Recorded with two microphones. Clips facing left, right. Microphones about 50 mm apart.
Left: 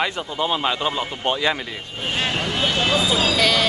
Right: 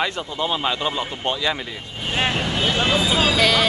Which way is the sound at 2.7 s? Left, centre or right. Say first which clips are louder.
Even; right.